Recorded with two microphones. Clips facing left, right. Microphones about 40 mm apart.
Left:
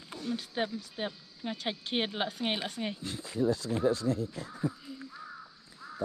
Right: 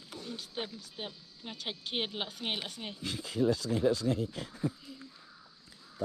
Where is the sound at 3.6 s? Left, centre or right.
Left.